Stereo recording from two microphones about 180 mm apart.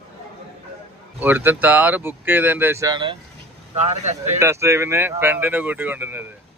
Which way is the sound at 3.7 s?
35° right (ahead or behind).